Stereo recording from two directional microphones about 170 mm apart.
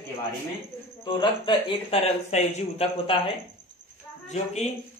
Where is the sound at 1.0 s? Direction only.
25° left (ahead or behind).